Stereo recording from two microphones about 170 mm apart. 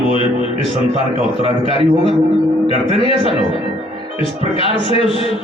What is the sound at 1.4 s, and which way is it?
Speech, 35° left (ahead or behind).